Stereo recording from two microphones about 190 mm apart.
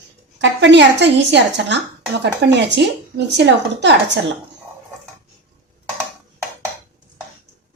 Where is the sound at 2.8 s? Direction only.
65° right (ahead or behind).